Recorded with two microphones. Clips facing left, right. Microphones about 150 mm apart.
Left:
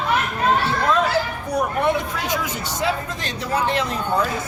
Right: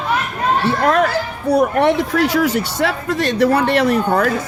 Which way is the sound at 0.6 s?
70° right (ahead or behind).